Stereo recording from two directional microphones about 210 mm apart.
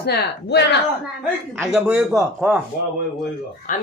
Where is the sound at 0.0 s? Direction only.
50° left (ahead or behind).